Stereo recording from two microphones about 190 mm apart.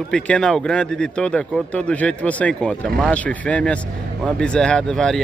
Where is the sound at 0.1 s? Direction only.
5° left (ahead or behind).